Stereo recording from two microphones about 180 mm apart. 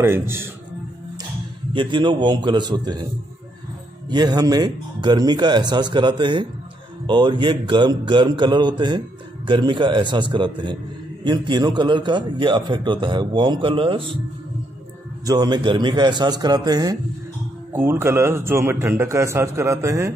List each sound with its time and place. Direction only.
0.0 s a man's voice: 15° right (ahead or behind)
1.7 s a man's voice: 25° right (ahead or behind)
4.1 s a man's voice: 25° right (ahead or behind)
15.2 s a man's voice: 25° right (ahead or behind)